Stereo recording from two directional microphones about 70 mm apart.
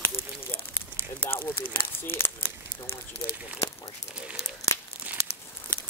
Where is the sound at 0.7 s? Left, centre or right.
Left.